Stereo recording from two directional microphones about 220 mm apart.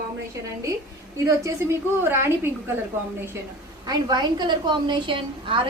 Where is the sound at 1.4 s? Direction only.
15° right (ahead or behind).